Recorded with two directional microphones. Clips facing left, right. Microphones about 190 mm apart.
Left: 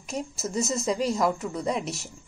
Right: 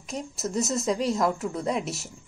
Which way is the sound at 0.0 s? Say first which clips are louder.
Even; centre (ahead or behind).